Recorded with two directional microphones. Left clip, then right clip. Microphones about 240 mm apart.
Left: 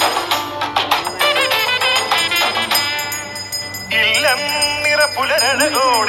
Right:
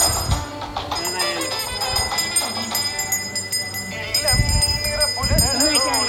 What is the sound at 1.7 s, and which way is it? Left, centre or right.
Music, left.